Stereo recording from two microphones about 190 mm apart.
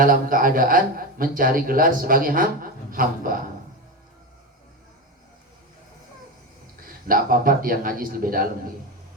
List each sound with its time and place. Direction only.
0.0 s a man's voice: 45° right (ahead or behind)
6.8 s a man's voice: 50° right (ahead or behind)